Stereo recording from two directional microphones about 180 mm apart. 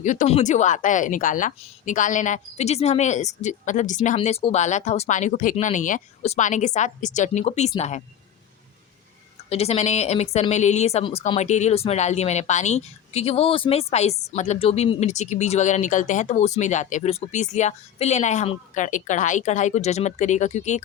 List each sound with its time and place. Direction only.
0.0 s a woman's voice: 45° left (ahead or behind)
9.5 s a woman's voice: 35° left (ahead or behind)